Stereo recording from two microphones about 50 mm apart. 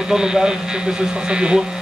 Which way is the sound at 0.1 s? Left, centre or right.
Centre.